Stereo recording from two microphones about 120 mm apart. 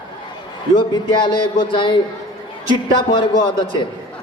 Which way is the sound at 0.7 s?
40° left (ahead or behind).